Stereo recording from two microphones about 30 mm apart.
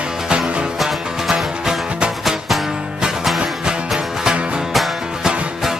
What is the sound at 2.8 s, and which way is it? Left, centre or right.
Music, right.